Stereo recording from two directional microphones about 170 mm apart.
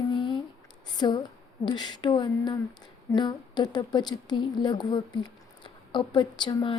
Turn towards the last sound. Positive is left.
turn(degrees=25)  # may be behind; listen again after turning